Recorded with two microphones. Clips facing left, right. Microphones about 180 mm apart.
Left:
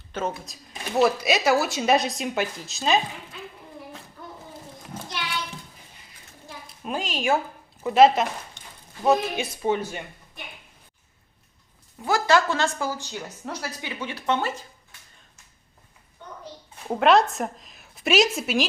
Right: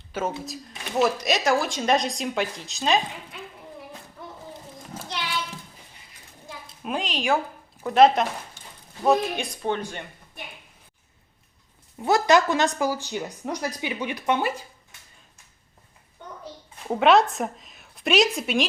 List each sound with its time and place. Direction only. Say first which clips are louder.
0.1 s speech: even; 10° right (ahead or behind)
0.9 s speech: left 2 dB; 5° left (ahead or behind)
4.9 s a sound: left 1 dB; 10° right (ahead or behind)
6.8 s speech: even; centre (ahead or behind)
12.0 s a woman's voice: right 2 dB; 20° right (ahead or behind)
16.9 s speech: even; centre (ahead or behind)